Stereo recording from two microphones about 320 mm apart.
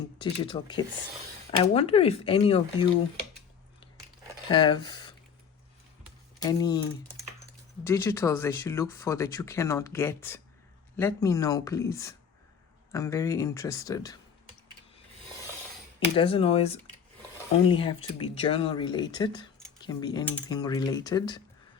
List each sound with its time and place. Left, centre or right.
0.4 s speech: centre
4.4 s speech: centre
6.4 s speech: centre
7.9 s speech: centre
16.1 s speech: centre